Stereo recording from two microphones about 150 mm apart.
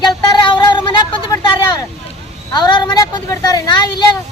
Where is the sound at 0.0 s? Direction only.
30° left (ahead or behind).